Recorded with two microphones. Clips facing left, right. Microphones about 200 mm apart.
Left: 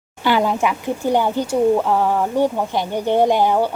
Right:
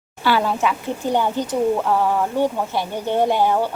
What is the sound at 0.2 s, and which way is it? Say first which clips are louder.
Speech: left 2 dB; 15° left (ahead or behind).